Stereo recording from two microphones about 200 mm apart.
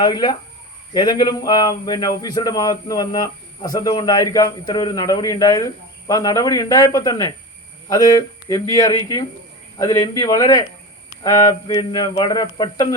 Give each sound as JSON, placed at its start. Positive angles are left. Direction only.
{"t": 0.0, "sound": "a man's voice", "side_deg": 20}